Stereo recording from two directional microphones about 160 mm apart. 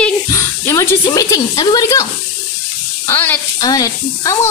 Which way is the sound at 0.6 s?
15° left (ahead or behind).